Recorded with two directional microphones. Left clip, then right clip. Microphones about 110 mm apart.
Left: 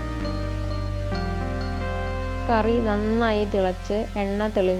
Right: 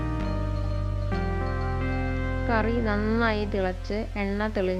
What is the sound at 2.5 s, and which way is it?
Speech, 20° left (ahead or behind).